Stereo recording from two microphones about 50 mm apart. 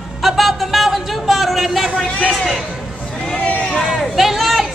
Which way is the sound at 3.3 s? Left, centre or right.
Left.